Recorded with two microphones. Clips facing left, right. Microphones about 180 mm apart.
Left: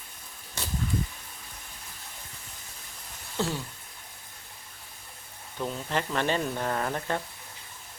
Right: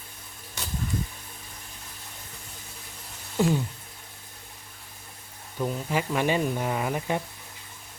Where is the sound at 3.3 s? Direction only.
15° right (ahead or behind).